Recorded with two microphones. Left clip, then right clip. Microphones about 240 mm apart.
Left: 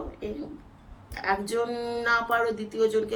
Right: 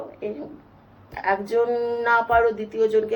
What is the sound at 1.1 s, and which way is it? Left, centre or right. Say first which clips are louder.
A woman's voice: right 5 dB; centre.